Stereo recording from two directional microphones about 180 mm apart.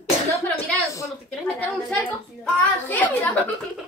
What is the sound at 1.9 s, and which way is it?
Speech, 5° left (ahead or behind).